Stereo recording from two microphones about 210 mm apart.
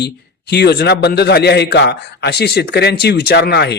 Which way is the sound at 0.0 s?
55° left (ahead or behind).